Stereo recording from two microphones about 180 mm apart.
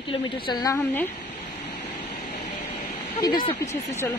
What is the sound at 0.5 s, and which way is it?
Speech, 20° left (ahead or behind).